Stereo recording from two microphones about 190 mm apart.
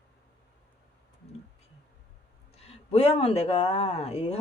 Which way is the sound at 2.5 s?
30° left (ahead or behind).